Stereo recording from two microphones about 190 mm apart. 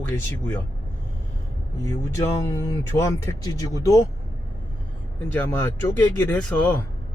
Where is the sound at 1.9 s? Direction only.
15° left (ahead or behind).